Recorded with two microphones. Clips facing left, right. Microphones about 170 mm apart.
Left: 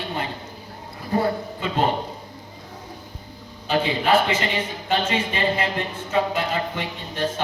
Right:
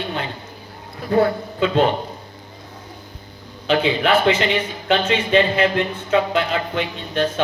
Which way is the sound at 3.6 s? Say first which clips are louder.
Right 4 dB; 75° right (ahead or behind).